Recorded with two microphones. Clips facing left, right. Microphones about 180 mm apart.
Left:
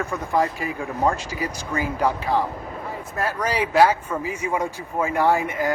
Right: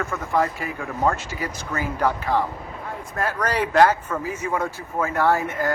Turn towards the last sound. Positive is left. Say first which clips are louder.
# left 1 dB
turn(degrees=15)  # may be behind; listen again after turning